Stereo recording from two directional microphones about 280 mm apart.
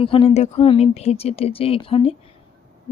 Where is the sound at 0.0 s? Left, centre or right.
Centre.